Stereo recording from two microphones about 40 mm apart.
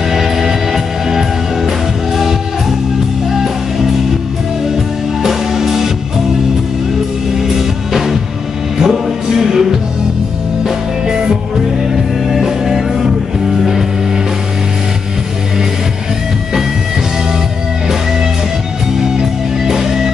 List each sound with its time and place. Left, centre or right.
0.1 s music: centre
3.3 s music: centre
5.2 s music: centre
7.3 s music: centre
11.9 s music: centre
19.7 s music: centre